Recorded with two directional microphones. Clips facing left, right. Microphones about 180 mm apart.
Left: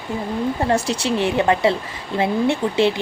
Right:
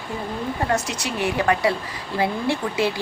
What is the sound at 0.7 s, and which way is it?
A woman's voice, 30° left (ahead or behind).